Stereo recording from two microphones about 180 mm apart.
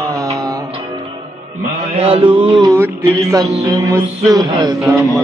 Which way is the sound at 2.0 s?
30° right (ahead or behind).